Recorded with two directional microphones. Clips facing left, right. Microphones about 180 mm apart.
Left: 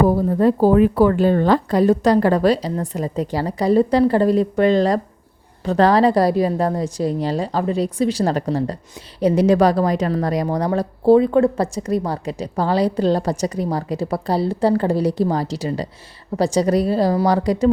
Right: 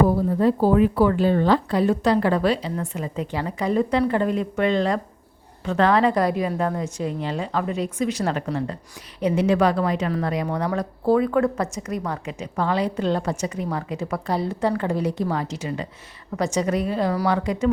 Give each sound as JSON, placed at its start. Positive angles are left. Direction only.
{"t": 0.3, "sound": "a woman's voice", "side_deg": 45}